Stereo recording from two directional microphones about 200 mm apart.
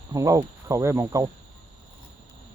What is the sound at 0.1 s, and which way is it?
Speech, 15° right (ahead or behind).